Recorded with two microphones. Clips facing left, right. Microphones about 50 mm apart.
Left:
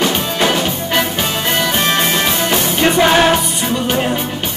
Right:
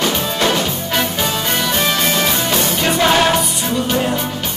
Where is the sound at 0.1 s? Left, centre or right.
Left.